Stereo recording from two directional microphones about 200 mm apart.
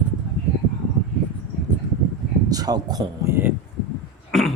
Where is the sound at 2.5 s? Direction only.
20° right (ahead or behind).